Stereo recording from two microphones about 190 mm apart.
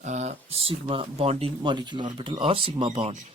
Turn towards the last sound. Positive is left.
turn(degrees=-30)  # may be behind; listen again after turning